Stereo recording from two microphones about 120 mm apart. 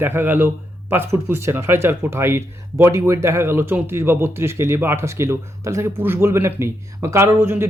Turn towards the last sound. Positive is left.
turn(degrees=-20)  # may be behind; listen again after turning